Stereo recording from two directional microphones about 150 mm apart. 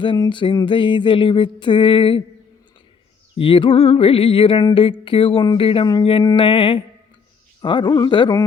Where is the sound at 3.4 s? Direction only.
35° left (ahead or behind).